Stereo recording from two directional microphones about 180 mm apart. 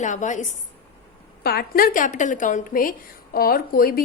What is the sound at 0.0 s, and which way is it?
Speech, 45° left (ahead or behind).